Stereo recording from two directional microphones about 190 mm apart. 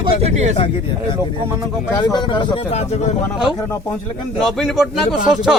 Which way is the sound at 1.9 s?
20° left (ahead or behind).